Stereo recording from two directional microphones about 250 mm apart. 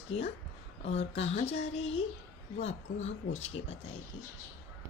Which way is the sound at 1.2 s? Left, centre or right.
Left.